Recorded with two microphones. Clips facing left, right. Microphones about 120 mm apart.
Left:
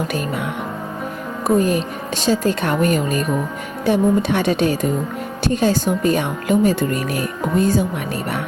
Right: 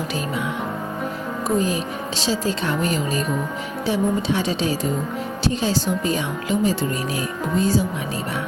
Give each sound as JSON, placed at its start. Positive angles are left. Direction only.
{"t": 1.5, "sound": "a woman's voice", "side_deg": 55}